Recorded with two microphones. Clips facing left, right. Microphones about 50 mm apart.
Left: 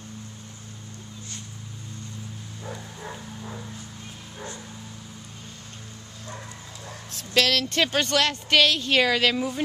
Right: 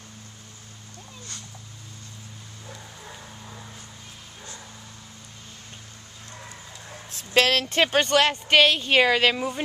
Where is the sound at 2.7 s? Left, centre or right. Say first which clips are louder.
Left 5 dB; centre.